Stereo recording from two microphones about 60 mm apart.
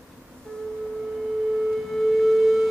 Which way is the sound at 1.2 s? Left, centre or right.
Centre.